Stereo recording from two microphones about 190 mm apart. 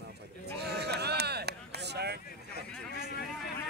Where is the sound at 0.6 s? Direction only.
60° right (ahead or behind).